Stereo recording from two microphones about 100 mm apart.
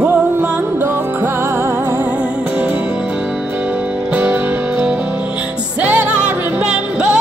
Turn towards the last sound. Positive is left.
turn(degrees=-10)  # may be behind; listen again after turning